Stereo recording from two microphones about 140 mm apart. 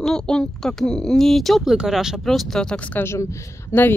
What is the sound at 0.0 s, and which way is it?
Speech, 5° left (ahead or behind).